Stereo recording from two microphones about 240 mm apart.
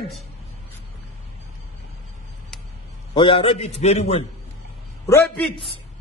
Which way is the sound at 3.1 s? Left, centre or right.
Left.